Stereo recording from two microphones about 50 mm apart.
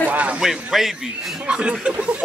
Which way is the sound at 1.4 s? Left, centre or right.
Centre.